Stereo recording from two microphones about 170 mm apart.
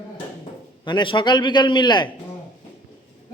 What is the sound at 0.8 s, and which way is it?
A man's voice, 25° left (ahead or behind).